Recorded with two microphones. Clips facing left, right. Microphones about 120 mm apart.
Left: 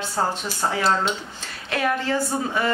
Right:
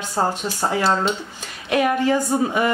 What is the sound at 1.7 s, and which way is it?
Speech, 15° right (ahead or behind).